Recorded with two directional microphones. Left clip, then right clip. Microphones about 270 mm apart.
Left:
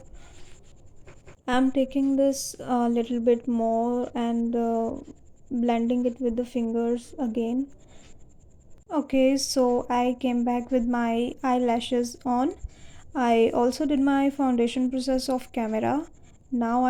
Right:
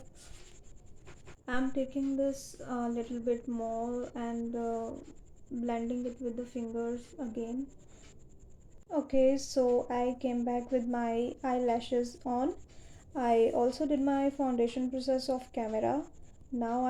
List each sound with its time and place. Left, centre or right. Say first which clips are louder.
1.5 s speech: left 10 dB; left
8.9 s speech: left 5 dB; left